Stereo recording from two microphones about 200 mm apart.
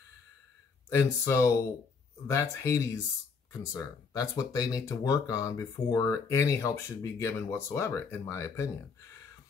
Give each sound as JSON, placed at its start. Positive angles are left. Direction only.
{"t": 0.8, "sound": "speech", "side_deg": 15}